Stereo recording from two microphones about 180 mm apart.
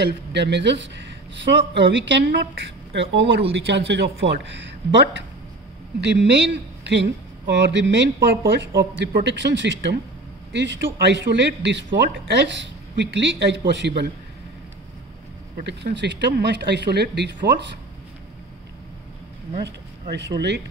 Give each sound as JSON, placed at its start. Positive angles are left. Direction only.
{"t": 0.0, "sound": "speech", "side_deg": -75}
{"t": 15.6, "sound": "speech", "side_deg": -75}
{"t": 19.6, "sound": "speech", "side_deg": -70}